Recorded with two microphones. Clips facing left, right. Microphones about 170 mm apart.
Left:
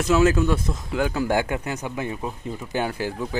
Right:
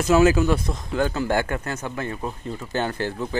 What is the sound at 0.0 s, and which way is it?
Speech, centre (ahead or behind).